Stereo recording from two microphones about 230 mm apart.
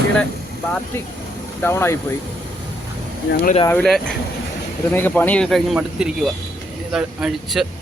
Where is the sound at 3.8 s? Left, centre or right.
Centre.